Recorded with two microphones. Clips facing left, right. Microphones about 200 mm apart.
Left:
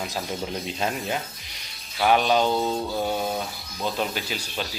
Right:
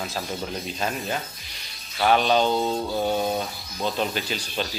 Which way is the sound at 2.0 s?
5° left (ahead or behind).